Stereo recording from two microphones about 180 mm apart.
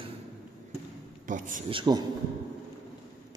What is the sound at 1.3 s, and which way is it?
Speech, 45° right (ahead or behind).